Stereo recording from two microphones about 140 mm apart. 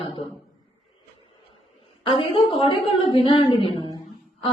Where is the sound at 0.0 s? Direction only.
35° left (ahead or behind).